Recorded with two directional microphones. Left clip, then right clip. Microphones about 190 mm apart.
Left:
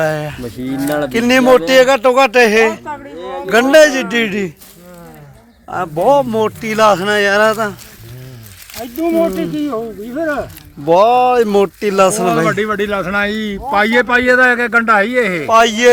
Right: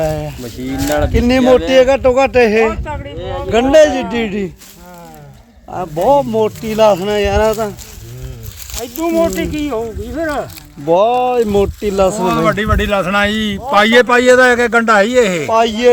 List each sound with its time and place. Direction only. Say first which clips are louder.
0.0 s speech: left 1 dB; centre (ahead or behind)
0.4 s speech: right 3 dB; 35° left (ahead or behind)
1.1 s speech: left 2 dB; 5° right (ahead or behind)
3.2 s a sound: right 2 dB; 35° left (ahead or behind)
3.4 s speech: left 1 dB; 5° right (ahead or behind)
6.0 s speech: even; centre (ahead or behind)
8.8 s speech: even; 30° left (ahead or behind)
9.3 s speech: even; centre (ahead or behind)
9.7 s speech: right 1 dB; 20° left (ahead or behind)
10.8 s speech: left 2 dB; centre (ahead or behind)
12.5 s a man's voice: right 1 dB; 55° right (ahead or behind)
15.4 s speech: left 2 dB; 5° left (ahead or behind)